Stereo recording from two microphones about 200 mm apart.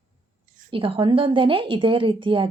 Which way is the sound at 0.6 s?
25° right (ahead or behind).